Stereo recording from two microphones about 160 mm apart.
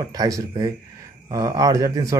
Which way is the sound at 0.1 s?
20° right (ahead or behind).